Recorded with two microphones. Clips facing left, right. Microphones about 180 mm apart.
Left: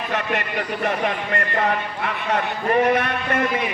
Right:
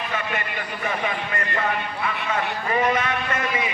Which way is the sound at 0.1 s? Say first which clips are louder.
Left 6 dB; 70° left (ahead or behind).